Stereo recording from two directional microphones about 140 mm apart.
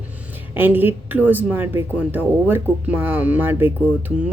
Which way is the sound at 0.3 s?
15° right (ahead or behind).